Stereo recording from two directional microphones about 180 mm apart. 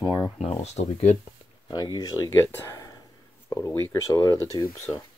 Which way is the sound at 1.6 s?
20° left (ahead or behind).